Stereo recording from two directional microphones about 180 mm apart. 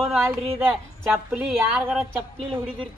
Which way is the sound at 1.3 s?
5° right (ahead or behind).